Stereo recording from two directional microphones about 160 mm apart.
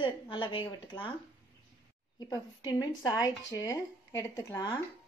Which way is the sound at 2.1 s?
25° left (ahead or behind).